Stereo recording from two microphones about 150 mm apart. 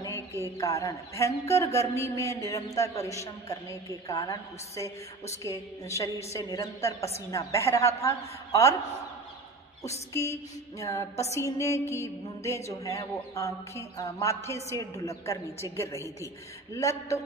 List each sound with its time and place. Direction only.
0.4 s a man's voice: 20° left (ahead or behind)
10.8 s a man's voice: 20° left (ahead or behind)